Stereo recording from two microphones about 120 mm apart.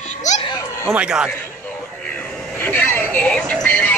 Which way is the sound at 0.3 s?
75° left (ahead or behind).